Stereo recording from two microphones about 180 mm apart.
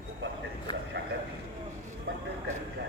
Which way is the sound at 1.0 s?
80° right.